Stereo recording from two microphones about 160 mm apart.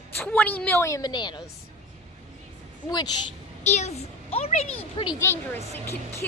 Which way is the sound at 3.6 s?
45° left (ahead or behind).